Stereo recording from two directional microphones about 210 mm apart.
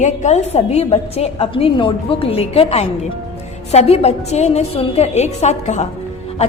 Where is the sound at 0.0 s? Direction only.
35° left (ahead or behind).